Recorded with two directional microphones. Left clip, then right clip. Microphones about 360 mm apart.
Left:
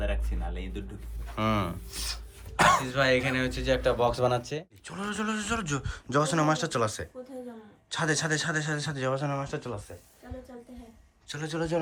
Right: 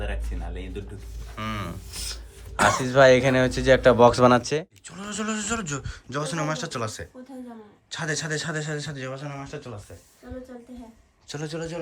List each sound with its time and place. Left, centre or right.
1.4 s a man's voice: centre
2.7 s speech: centre
4.9 s a man's voice: centre
11.3 s a man's voice: centre